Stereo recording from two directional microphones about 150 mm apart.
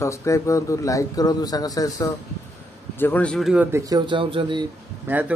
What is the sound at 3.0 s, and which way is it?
Speech, 10° left (ahead or behind).